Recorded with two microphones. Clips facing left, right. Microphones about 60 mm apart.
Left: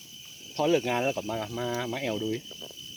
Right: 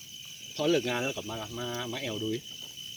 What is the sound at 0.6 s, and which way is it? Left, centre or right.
Speech, centre.